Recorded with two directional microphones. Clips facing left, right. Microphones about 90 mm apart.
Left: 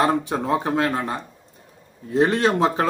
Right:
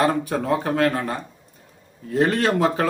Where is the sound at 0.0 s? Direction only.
20° left (ahead or behind).